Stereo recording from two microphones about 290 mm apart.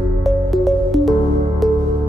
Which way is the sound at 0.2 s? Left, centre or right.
Centre.